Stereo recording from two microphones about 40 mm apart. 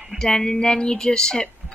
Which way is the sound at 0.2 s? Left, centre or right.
Centre.